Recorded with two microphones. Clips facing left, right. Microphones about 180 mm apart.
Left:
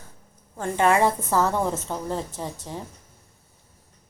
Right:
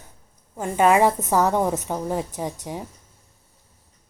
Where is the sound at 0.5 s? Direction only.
15° right (ahead or behind).